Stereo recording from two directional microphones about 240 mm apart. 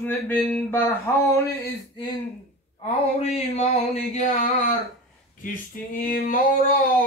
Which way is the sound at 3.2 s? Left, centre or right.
Left.